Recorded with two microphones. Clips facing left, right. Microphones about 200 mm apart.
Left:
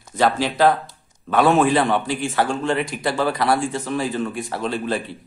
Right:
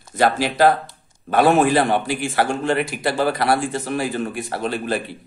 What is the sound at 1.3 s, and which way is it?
Speech, 5° right (ahead or behind).